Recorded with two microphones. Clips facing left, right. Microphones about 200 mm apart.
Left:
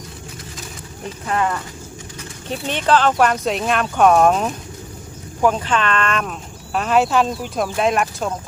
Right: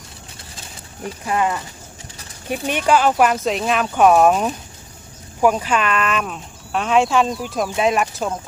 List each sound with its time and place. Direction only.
1.3 s speech: 10° right (ahead or behind)